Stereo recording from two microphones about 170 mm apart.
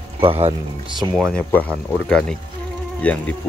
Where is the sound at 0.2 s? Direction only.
35° right (ahead or behind).